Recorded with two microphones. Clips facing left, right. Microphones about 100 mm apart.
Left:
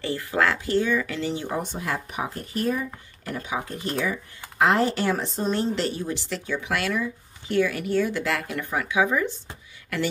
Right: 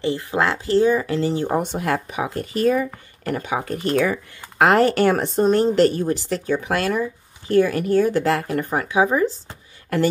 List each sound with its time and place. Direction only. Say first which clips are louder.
0.0 s speech: right 3 dB; 20° right (ahead or behind); by 1.6 s 45° right (ahead or behind)
1.6 s speech: right 7 dB; 65° right (ahead or behind); by 9.3 s 35° right (ahead or behind)